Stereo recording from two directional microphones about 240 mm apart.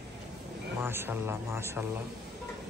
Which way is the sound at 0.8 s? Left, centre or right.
Centre.